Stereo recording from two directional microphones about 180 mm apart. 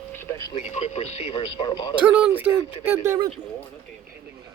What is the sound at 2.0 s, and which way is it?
Speech, 10° right (ahead or behind).